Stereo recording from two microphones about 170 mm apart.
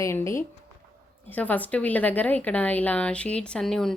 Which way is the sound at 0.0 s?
15° left (ahead or behind).